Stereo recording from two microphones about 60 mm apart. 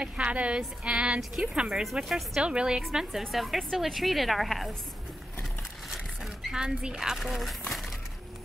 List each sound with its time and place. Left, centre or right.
0.0 s music: centre
1.3 s a woman's voice: centre
5.4 s vehicle: centre
6.6 s a woman's voice: centre